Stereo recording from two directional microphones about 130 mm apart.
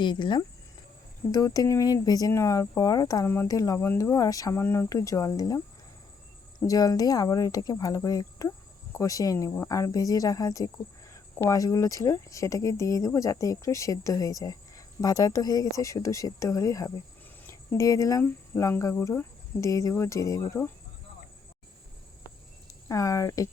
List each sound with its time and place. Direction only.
0.0 s speech: 35° left (ahead or behind)
1.3 s speech: 25° left (ahead or behind)
6.7 s speech: 30° left (ahead or behind)
22.9 s speech: 25° left (ahead or behind)